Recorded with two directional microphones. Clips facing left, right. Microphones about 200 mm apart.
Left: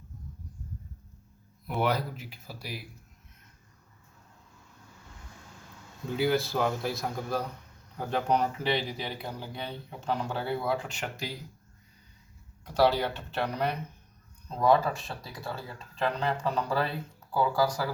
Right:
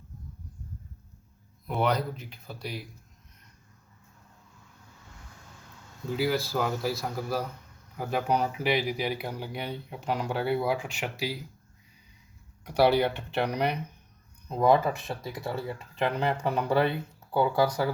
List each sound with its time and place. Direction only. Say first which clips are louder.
1.6 s speech: right 1 dB; 5° left (ahead or behind)
6.1 s speech: left 1 dB; centre (ahead or behind)
12.6 s speech: right 2 dB; 15° right (ahead or behind)